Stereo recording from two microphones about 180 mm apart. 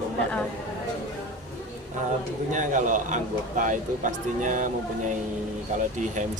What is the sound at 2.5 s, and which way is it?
A man's voice, 45° right (ahead or behind).